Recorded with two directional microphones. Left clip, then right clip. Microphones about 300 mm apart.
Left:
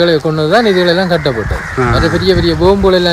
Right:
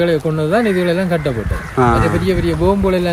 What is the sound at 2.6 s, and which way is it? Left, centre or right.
Speech, centre.